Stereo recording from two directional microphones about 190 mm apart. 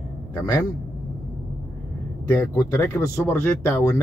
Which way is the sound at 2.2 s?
15° left (ahead or behind).